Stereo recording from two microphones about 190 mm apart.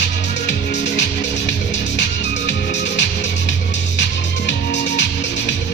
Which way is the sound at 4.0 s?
70° left (ahead or behind).